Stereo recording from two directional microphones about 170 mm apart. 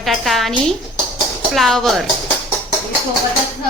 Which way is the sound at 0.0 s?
Centre (ahead or behind).